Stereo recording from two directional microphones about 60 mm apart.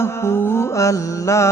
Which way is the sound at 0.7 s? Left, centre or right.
Left.